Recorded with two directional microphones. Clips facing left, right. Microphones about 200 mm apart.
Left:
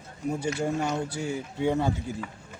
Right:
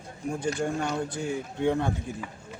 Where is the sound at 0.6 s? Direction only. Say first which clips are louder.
Left 1 dB; 5° left (ahead or behind).